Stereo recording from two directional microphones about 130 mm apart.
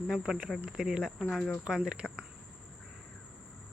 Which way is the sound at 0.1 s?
5° right (ahead or behind).